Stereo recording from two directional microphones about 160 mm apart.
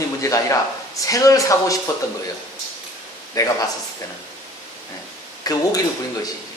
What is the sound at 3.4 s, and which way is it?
Speech, 20° left (ahead or behind).